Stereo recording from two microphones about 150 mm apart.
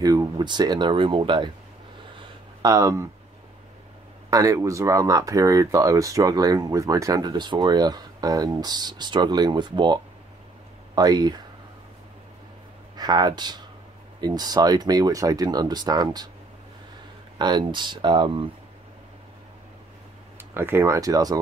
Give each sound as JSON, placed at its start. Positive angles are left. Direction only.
{"t": 0.0, "sound": "speech", "side_deg": -25}
{"t": 2.6, "sound": "speech", "side_deg": -20}
{"t": 4.3, "sound": "speech", "side_deg": -20}
{"t": 11.0, "sound": "speech", "side_deg": -25}
{"t": 12.9, "sound": "speech", "side_deg": -25}
{"t": 17.4, "sound": "speech", "side_deg": -30}
{"t": 20.5, "sound": "speech", "side_deg": -15}